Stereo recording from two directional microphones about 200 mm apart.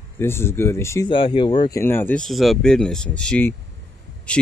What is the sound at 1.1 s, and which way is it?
Speech, 25° left (ahead or behind).